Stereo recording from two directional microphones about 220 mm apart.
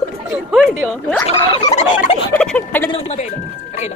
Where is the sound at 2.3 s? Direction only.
5° left (ahead or behind).